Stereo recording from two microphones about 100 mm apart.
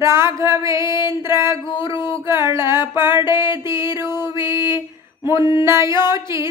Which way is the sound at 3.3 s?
50° left (ahead or behind).